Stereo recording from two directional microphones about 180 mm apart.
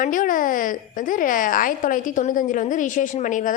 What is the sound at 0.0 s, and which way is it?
A woman's voice, 50° left (ahead or behind).